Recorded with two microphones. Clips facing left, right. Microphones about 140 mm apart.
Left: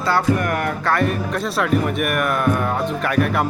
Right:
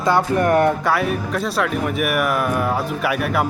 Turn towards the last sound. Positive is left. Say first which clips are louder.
# left 1 dB
turn(degrees=-5)  # may be behind; listen again after turning